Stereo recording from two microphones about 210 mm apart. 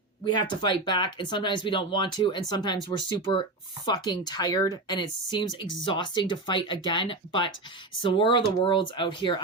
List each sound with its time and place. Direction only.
0.3 s speech: 20° left (ahead or behind)